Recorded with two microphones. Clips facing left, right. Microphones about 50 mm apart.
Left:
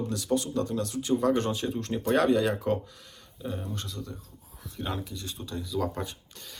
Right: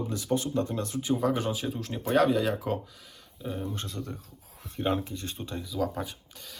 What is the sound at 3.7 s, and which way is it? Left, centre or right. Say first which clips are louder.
Speech: right 1 dB; right.